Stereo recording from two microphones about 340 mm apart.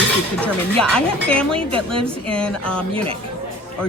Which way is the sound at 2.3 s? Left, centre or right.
Centre.